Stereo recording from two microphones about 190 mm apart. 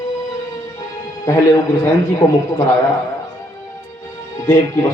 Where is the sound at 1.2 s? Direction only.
15° left (ahead or behind).